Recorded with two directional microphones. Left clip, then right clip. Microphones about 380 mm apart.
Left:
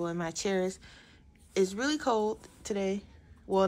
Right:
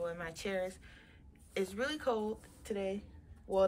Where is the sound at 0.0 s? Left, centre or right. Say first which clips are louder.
Left 6 dB; centre.